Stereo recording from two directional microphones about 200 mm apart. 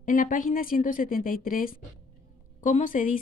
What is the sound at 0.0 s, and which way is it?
Speech, 40° left (ahead or behind).